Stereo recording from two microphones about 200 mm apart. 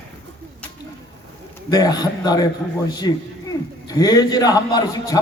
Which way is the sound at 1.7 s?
20° left (ahead or behind).